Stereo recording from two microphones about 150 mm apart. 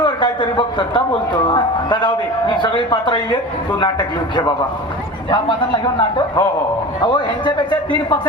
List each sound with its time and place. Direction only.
0.0 s a man's voice: 30° left (ahead or behind)